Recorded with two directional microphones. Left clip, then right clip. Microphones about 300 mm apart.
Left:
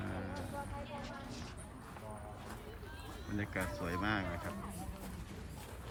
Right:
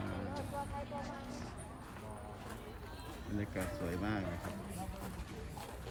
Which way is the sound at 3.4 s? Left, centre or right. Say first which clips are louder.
Left 1 dB; centre.